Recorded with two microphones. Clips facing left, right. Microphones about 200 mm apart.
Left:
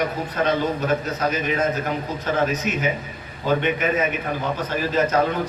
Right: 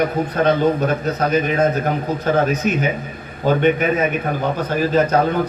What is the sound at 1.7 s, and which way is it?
Speech, 55° right (ahead or behind).